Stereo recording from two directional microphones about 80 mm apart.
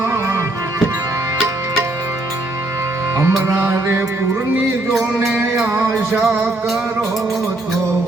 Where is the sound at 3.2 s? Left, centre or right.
Right.